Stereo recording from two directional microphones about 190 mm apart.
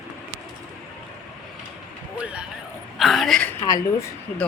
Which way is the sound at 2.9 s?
Centre (ahead or behind).